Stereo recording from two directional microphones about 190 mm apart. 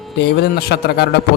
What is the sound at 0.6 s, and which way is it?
Speech, 55° left (ahead or behind).